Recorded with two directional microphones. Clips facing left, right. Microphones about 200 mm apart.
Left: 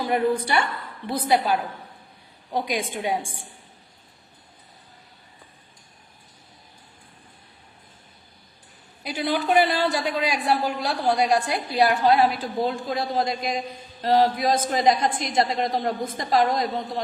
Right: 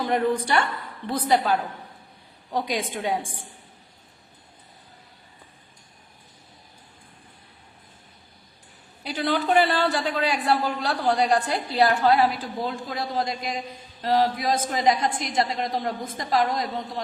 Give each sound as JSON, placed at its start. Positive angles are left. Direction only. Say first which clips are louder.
{"t": 0.0, "sound": "a man's voice", "louder": "left 1 dB", "side_deg": 10}
{"t": 9.0, "sound": "a man's voice", "louder": "even", "side_deg": 10}